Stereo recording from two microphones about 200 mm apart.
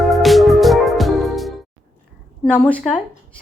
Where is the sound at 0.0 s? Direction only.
Centre (ahead or behind).